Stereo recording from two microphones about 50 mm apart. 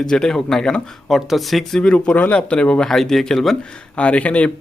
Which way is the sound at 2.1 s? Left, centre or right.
Left.